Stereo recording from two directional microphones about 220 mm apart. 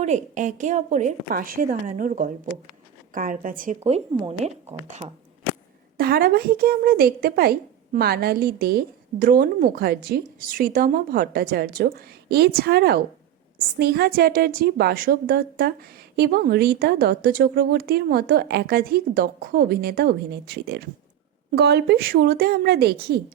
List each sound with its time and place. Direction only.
0.0 s a woman's voice: 35° right (ahead or behind)
3.8 s speech: 25° right (ahead or behind)
6.0 s a woman's voice: 45° right (ahead or behind)